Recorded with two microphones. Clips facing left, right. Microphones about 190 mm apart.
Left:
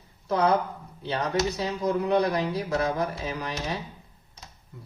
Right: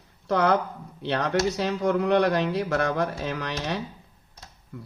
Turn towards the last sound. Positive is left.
turn(degrees=-80)